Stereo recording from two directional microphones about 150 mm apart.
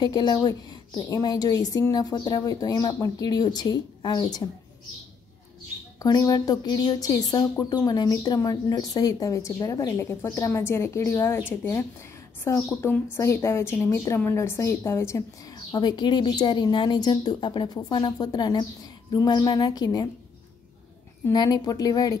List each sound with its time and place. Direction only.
0.0 s a woman's voice: 25° left (ahead or behind)
5.9 s a woman's voice: 25° left (ahead or behind)
21.3 s a woman's voice: 25° left (ahead or behind)